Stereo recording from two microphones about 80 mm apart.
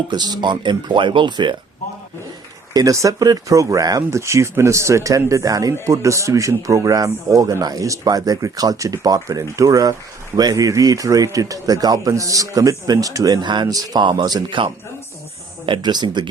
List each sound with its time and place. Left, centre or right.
0.1 s speech: right
2.7 s speech: right
4.2 s speech: right
13.4 s speech: right